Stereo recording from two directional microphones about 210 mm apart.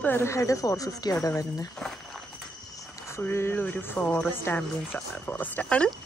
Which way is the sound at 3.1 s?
10° left (ahead or behind).